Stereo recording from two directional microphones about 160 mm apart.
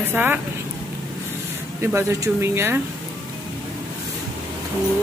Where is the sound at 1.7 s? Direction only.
15° right (ahead or behind).